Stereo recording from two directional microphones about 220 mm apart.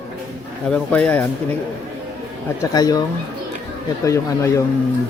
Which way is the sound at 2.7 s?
15° left (ahead or behind).